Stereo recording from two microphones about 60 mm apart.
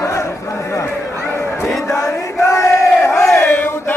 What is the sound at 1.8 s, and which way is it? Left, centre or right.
Chant, left.